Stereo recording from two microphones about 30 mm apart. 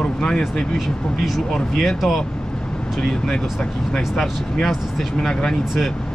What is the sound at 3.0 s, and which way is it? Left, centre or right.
Speech, left.